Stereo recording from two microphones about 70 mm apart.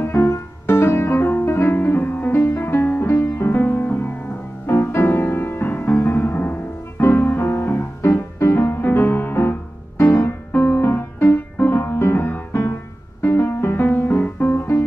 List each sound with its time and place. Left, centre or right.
0.0 s music: left